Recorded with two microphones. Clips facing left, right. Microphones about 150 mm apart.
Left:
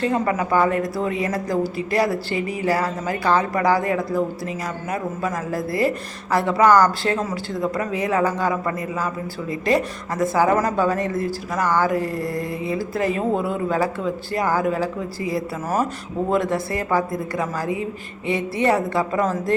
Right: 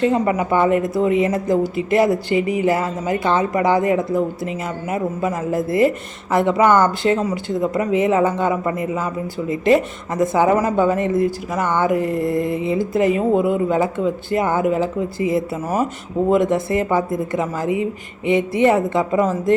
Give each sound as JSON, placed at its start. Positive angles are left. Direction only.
{"t": 0.0, "sound": "a woman's voice", "side_deg": -20}